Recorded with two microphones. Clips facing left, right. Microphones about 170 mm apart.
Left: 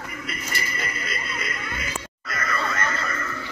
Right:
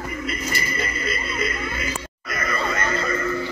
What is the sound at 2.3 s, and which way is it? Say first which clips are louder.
Music: right 3 dB; 15° right (ahead or behind).